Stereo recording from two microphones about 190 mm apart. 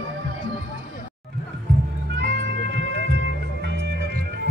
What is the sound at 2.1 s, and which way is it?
Music, 65° right (ahead or behind).